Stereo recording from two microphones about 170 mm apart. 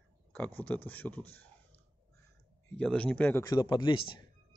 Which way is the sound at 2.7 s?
5° left (ahead or behind).